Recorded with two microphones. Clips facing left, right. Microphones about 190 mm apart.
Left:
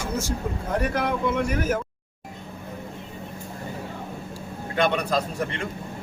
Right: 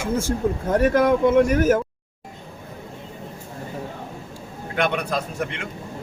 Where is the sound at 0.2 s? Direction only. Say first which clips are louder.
Right 6 dB; 50° right (ahead or behind).